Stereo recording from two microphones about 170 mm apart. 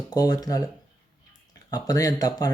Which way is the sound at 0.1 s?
20° left (ahead or behind).